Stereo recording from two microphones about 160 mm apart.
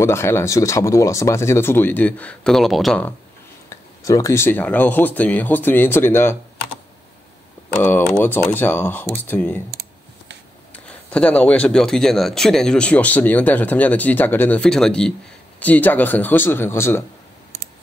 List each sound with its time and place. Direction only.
0.0 s speech: 15° left (ahead or behind)
4.0 s speech: 20° left (ahead or behind)
7.8 s speech: 10° left (ahead or behind)
10.7 s speech: 5° left (ahead or behind)